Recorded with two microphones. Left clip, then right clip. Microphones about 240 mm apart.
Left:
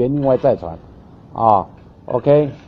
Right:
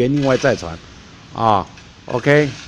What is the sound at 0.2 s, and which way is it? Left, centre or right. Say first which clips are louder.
A man's voice: left 1 dB; right.